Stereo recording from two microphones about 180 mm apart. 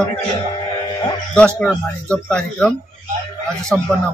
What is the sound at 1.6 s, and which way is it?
Speech, 5° left (ahead or behind).